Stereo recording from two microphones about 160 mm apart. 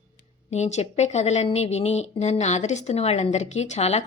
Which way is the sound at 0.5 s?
45° left (ahead or behind).